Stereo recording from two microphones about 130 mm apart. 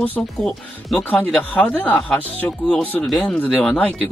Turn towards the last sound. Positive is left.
turn(degrees=10)  # may be behind; listen again after turning